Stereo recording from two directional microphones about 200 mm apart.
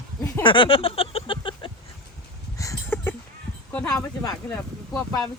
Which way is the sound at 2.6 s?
15° left (ahead or behind).